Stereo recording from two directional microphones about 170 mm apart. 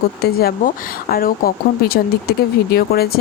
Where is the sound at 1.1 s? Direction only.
60° left (ahead or behind).